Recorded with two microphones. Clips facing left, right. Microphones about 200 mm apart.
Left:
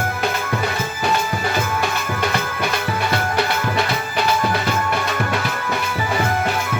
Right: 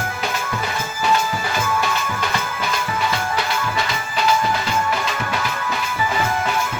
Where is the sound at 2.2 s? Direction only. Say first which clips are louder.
Left 3 dB; 60° left (ahead or behind).